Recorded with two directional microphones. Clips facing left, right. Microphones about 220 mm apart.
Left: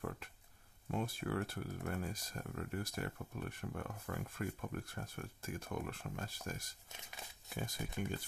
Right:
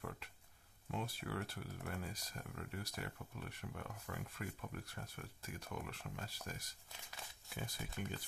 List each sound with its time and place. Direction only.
0.9 s speech: 50° left (ahead or behind)
6.9 s a sound: 20° left (ahead or behind)
7.4 s speech: 45° left (ahead or behind)